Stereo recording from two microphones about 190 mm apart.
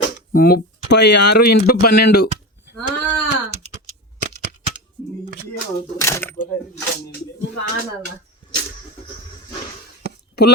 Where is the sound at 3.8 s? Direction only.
35° right (ahead or behind).